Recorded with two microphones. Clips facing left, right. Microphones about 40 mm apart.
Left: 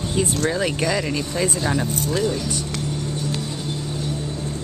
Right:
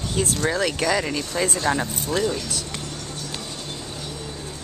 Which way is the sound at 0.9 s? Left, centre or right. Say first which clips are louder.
Left 1 dB; centre.